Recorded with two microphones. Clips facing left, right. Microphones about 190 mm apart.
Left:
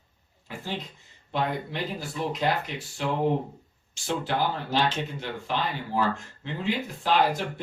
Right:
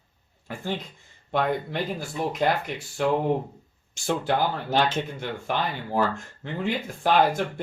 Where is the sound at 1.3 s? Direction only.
50° right (ahead or behind).